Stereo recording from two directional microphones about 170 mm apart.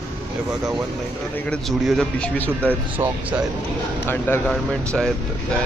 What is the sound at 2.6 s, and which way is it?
Speech, 10° right (ahead or behind).